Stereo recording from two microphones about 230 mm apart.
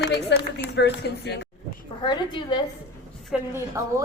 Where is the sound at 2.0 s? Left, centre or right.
Centre.